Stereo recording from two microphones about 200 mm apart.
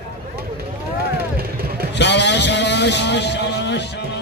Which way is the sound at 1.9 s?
60° left (ahead or behind).